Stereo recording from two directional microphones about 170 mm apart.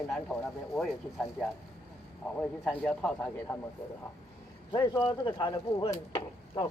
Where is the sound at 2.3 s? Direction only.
5° left (ahead or behind).